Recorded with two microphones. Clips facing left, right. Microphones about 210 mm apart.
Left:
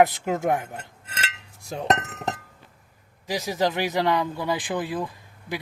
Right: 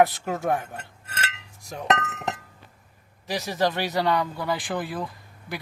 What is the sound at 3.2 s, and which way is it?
Speech, 15° left (ahead or behind).